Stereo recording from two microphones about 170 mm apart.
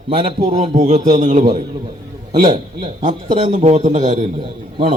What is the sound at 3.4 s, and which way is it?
Speech, 45° right (ahead or behind).